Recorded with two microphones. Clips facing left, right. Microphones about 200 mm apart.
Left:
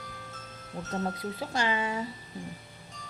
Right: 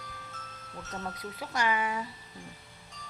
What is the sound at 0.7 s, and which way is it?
Speech, 30° left (ahead or behind).